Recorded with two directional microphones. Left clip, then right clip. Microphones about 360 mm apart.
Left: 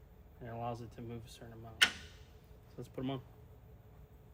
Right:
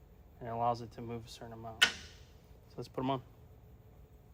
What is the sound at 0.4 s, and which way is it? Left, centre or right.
Speech, centre.